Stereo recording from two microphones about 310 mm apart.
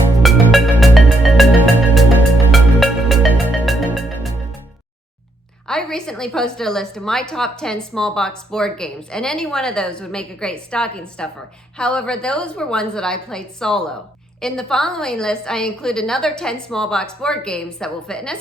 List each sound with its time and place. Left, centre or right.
0.2 s music: centre
5.6 s a woman's voice: centre